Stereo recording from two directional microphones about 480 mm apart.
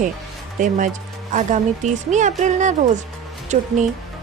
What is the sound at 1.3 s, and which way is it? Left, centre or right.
Speech, centre.